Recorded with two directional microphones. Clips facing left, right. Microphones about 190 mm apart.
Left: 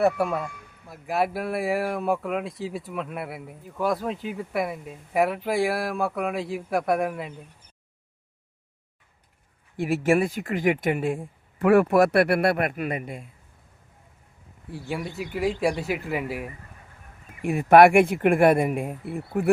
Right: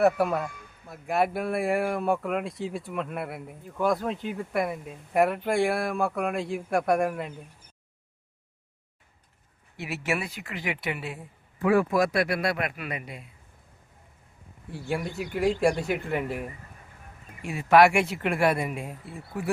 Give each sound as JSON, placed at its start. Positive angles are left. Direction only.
{"t": 0.0, "sound": "speech", "side_deg": 0}
{"t": 9.7, "sound": "speech", "side_deg": 50}
{"t": 11.7, "sound": "speech", "side_deg": 65}
{"t": 14.7, "sound": "speech", "side_deg": 0}
{"t": 17.4, "sound": "speech", "side_deg": 55}